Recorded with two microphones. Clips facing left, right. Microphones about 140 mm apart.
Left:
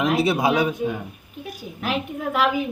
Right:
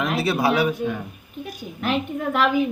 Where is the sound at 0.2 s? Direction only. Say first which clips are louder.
Left 1 dB; 20° left (ahead or behind).